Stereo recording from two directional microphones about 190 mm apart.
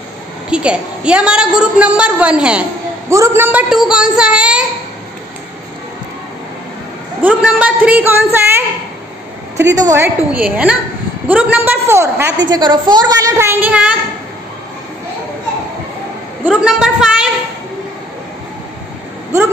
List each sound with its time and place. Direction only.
0.5 s a woman's voice: 5° right (ahead or behind)
7.2 s a woman's voice: 5° right (ahead or behind)
12.4 s a woman's voice: 25° right (ahead or behind); by 13.9 s 5° right (ahead or behind)
16.4 s a woman's voice: 5° right (ahead or behind)